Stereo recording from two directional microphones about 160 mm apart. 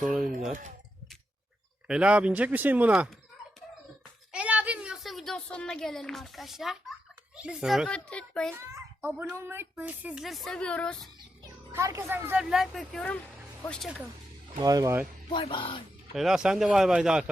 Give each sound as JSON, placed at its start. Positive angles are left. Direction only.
{"t": 0.0, "sound": "speech", "side_deg": 0}
{"t": 1.9, "sound": "speech", "side_deg": -5}
{"t": 4.3, "sound": "a sound", "side_deg": -10}
{"t": 7.3, "sound": "speech", "side_deg": -5}
{"t": 7.9, "sound": "a woman's voice", "side_deg": 5}
{"t": 8.7, "sound": "speech", "side_deg": -10}
{"t": 11.7, "sound": "speech", "side_deg": -15}
{"t": 14.6, "sound": "speech", "side_deg": -20}
{"t": 15.3, "sound": "speech", "side_deg": 30}
{"t": 16.1, "sound": "speech", "side_deg": 0}